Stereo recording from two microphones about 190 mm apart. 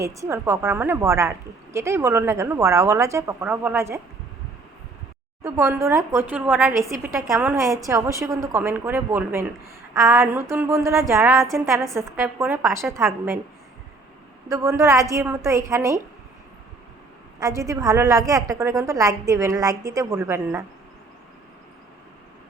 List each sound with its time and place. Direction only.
0.0 s a woman's voice: 15° right (ahead or behind)
5.4 s a woman's voice: 15° right (ahead or behind)
14.5 s a woman's voice: 15° right (ahead or behind)
17.4 s a woman's voice: 15° right (ahead or behind)